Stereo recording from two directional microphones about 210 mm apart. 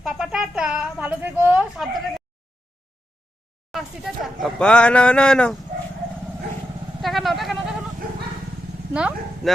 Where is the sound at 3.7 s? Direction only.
Centre (ahead or behind).